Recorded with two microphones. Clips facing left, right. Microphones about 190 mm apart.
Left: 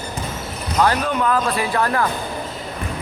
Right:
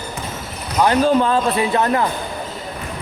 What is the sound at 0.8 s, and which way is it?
Speech, 25° right (ahead or behind).